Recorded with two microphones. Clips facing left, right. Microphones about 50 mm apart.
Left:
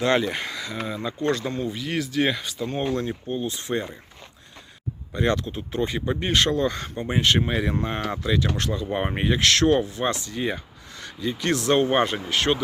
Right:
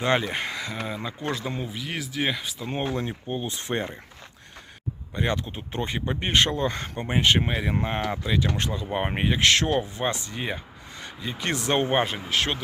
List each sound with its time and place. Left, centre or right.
0.0 s speech: centre
0.3 s speech: right
0.9 s speech: centre
2.9 s speech: centre
3.5 s speech: right
5.1 s speech: centre; by 7.2 s right
7.2 s speech: centre
9.0 s speech: centre
11.9 s speech: centre